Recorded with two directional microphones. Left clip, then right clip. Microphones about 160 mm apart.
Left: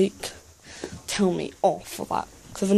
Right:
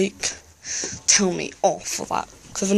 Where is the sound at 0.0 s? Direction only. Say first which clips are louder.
Right 1 dB; 20° left (ahead or behind).